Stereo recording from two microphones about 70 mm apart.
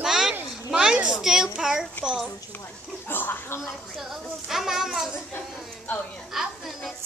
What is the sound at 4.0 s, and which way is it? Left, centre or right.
A child's voice, centre.